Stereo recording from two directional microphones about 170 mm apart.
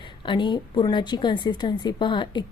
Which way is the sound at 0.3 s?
25° left (ahead or behind).